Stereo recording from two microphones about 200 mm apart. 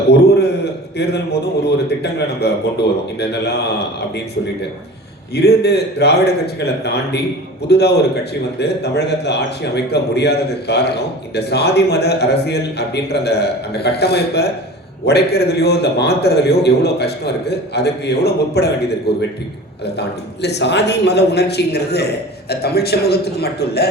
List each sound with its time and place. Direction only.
0.6 s a man's voice: 55° left (ahead or behind)
5.3 s a man's voice: 55° left (ahead or behind)